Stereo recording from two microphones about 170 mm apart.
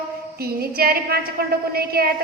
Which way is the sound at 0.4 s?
65° right (ahead or behind).